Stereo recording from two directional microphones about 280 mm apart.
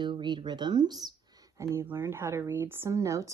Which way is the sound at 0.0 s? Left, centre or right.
Centre.